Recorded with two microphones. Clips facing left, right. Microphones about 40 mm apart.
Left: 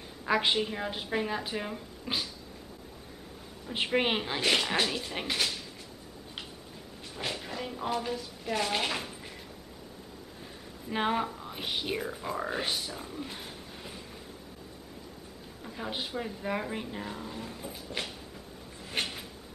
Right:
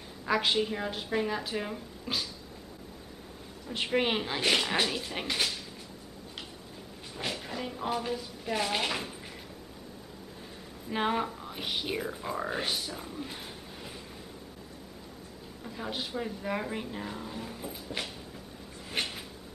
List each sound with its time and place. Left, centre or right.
0.2 s a woman's voice: centre
2.1 s a woman's voice: centre
3.6 s a woman's voice: centre
7.2 s speech: centre
10.9 s speech: centre
15.6 s speech: centre
18.9 s a sound: centre